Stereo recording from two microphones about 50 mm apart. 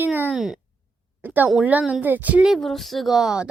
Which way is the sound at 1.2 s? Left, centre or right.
Right.